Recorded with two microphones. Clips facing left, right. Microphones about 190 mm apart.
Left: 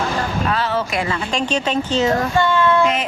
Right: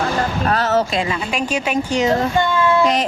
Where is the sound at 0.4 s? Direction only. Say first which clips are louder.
Right 5 dB; 45° right (ahead or behind).